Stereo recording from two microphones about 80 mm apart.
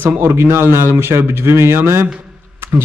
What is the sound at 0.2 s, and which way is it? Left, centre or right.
A man's voice, right.